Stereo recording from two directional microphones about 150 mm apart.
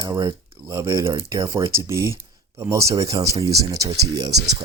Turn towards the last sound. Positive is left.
turn(degrees=-25)  # may be behind; listen again after turning